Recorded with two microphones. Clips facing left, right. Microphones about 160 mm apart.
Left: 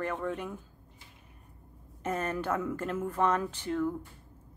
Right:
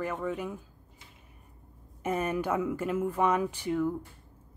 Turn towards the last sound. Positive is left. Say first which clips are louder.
# right 2 dB
turn(degrees=-10)  # may be behind; listen again after turning